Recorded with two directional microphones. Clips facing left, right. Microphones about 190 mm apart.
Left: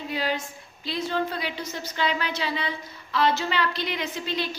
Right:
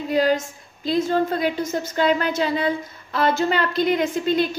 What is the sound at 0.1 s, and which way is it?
A woman's voice, 45° right (ahead or behind).